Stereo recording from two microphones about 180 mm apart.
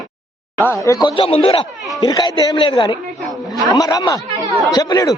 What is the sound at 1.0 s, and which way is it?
A man's voice, 30° left (ahead or behind).